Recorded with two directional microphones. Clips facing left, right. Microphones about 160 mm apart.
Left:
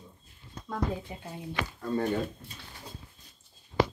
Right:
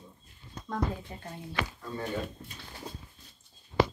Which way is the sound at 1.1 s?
10° left (ahead or behind).